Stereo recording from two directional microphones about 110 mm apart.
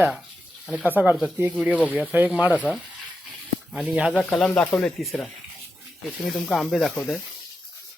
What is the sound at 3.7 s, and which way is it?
Speech, 10° right (ahead or behind).